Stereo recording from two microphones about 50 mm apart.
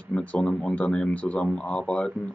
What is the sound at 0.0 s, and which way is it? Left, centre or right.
Speech, left.